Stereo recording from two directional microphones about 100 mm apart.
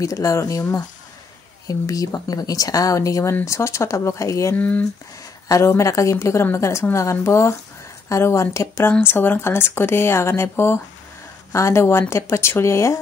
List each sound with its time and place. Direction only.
0.0 s speech: 35° left (ahead or behind)
4.6 s speech: 15° left (ahead or behind)
5.5 s speech: 30° left (ahead or behind)